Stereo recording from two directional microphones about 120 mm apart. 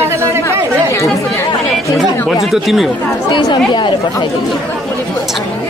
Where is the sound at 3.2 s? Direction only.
40° left (ahead or behind).